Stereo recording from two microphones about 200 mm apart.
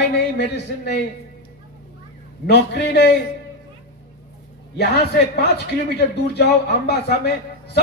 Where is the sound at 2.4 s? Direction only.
55° left (ahead or behind).